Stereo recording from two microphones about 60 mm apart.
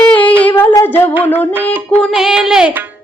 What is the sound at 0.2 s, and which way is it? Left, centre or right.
Child singing, left.